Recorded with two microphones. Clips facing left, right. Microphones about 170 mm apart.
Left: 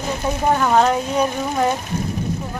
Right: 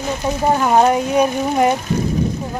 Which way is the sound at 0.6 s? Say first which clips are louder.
Right 4 dB; 15° right (ahead or behind).